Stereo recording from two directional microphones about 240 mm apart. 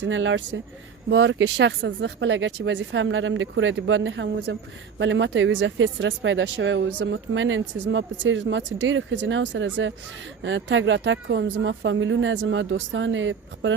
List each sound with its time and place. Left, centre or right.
0.0 s speech: right